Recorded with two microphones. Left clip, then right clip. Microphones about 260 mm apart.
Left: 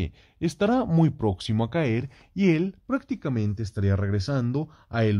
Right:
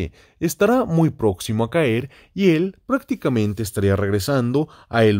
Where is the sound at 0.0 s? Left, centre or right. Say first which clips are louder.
Right 5 dB; right.